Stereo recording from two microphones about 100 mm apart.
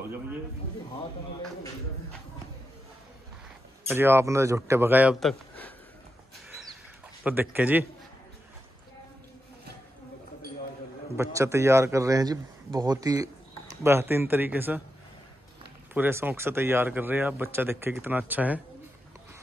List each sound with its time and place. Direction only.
3.8 s speech: 25° right (ahead or behind)
7.2 s speech: 15° right (ahead or behind)
11.1 s speech: 30° right (ahead or behind)
13.8 s speech: 25° right (ahead or behind)
15.9 s speech: 20° right (ahead or behind)